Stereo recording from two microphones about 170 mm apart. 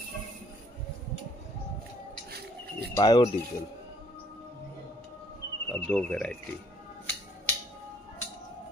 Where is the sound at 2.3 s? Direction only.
70° right (ahead or behind).